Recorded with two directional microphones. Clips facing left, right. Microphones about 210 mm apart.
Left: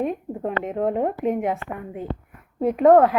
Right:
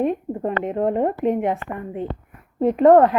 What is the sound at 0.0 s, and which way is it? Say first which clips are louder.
A woman's voice: right 3 dB; centre (ahead or behind).